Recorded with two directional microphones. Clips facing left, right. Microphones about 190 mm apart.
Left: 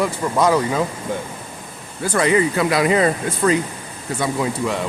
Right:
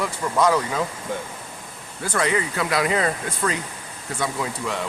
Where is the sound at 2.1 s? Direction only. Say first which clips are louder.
Left 6 dB; 15° left (ahead or behind).